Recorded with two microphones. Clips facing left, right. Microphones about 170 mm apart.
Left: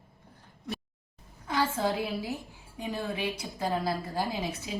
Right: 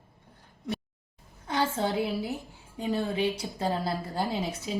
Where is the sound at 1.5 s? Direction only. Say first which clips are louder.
Right 1 dB; 25° right (ahead or behind).